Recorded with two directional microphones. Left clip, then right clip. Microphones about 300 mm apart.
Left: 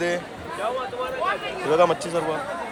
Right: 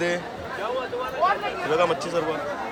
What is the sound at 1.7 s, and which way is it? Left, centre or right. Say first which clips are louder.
Speech: left 4 dB; centre.